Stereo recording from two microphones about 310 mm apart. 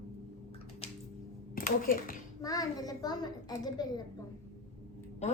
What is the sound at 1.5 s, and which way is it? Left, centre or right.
Speech, left.